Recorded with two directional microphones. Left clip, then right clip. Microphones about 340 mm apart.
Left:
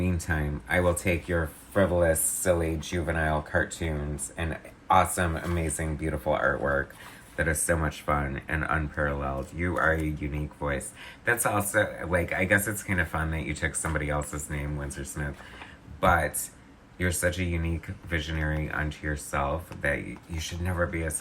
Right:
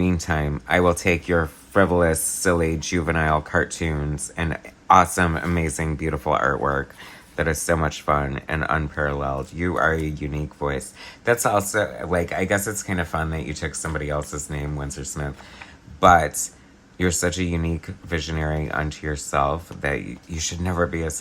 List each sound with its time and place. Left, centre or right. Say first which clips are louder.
0.0 s speech: right 7 dB; centre
4.9 s speech: right 7 dB; centre